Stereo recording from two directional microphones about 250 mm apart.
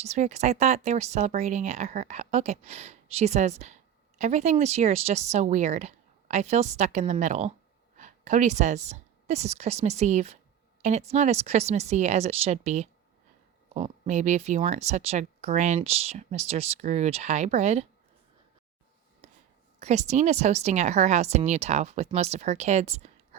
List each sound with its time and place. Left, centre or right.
0.0 s a woman's voice: right
19.8 s speech: right